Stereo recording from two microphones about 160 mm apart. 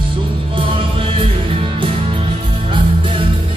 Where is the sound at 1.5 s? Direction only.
35° right (ahead or behind).